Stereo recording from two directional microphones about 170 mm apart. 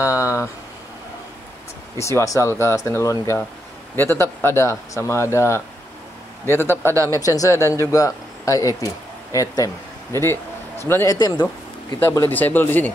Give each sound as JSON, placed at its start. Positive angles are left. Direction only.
{"t": 0.0, "sound": "a sound", "side_deg": 15}
{"t": 2.0, "sound": "speech", "side_deg": 15}
{"t": 6.4, "sound": "a man's voice", "side_deg": -15}
{"t": 7.2, "sound": "speech", "side_deg": 20}